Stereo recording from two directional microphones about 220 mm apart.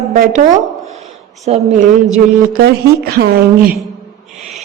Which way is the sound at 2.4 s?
45° right (ahead or behind).